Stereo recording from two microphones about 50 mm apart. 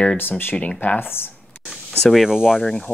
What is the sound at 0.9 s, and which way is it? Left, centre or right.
Speech, left.